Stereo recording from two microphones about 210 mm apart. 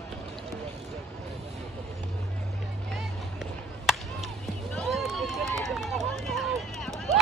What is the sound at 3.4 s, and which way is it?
Chop, centre (ahead or behind).